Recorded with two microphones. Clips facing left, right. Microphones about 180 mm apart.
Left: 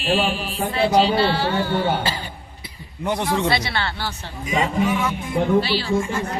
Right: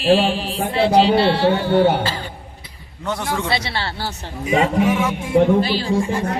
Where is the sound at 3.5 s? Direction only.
30° right (ahead or behind).